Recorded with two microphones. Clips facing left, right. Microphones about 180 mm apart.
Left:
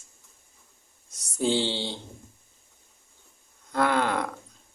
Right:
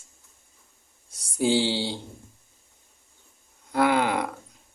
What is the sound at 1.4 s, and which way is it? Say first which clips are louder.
Speech: right 3 dB; 10° right (ahead or behind).